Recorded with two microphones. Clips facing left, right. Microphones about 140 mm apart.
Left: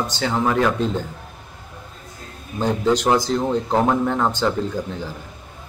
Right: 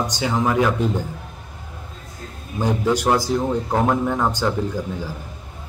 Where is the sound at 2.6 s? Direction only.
10° right (ahead or behind).